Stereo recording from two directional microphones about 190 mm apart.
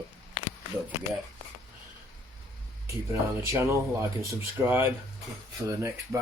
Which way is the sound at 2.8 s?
15° right (ahead or behind).